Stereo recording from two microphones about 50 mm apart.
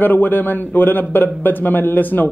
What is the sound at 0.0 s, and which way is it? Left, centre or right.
A man's voice, left.